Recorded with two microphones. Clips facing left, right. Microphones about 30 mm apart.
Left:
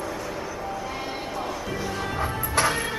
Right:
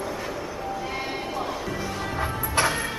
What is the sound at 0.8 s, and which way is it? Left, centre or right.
Music, centre.